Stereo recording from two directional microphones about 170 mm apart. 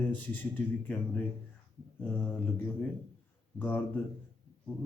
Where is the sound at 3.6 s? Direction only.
10° left (ahead or behind).